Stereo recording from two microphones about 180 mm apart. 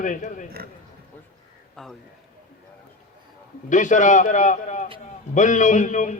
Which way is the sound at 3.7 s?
45° left (ahead or behind).